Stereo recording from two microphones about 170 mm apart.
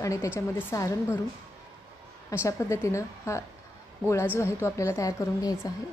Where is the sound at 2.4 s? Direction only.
15° left (ahead or behind).